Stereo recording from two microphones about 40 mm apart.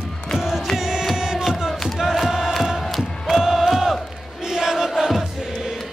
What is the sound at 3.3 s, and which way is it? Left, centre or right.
Crowd, centre.